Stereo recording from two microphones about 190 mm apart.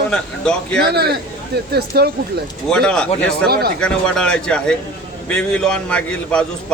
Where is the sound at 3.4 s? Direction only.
60° right (ahead or behind).